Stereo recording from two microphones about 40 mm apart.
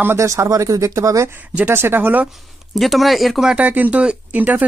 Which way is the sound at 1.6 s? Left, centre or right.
Right.